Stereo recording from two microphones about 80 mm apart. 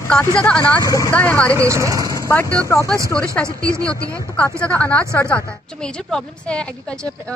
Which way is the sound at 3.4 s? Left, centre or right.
Right.